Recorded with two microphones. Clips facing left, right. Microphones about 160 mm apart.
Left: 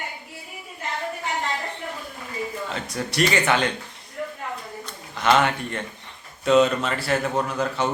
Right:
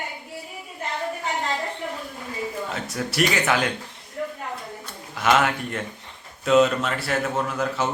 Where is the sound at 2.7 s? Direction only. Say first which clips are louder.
Even; 5° right (ahead or behind).